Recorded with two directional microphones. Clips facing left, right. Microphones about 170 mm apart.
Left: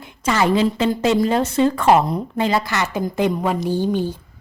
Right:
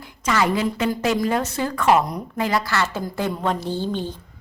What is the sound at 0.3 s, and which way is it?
A woman's voice, 25° left (ahead or behind).